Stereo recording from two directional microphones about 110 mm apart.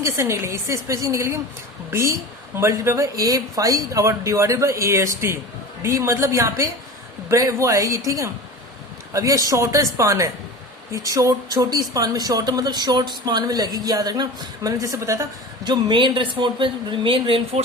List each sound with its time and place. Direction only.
0.0 s speech: 25° right (ahead or behind)
15.6 s a woman's voice: 45° right (ahead or behind)